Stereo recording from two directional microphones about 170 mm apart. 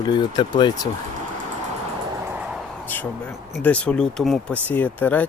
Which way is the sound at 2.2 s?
10° right (ahead or behind).